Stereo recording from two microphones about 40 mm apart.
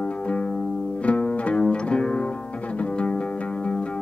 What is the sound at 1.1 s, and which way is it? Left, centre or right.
Music, left.